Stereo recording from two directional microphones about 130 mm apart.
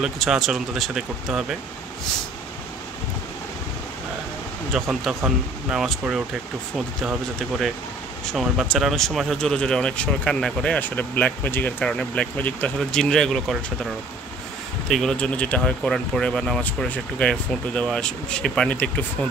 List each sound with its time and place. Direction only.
0.0 s speech: centre (ahead or behind)
4.7 s speech: centre (ahead or behind)
14.9 s speech: 5° left (ahead or behind)